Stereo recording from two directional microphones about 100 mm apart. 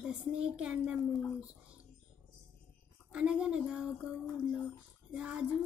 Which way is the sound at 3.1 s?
10° right (ahead or behind).